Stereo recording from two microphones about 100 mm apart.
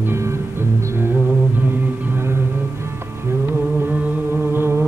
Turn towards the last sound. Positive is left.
turn(degrees=-25)  # may be behind; listen again after turning